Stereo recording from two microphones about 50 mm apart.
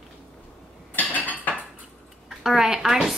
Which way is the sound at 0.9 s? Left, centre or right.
Left.